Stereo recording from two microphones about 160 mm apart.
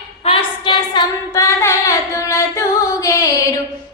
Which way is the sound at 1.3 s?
20° left (ahead or behind).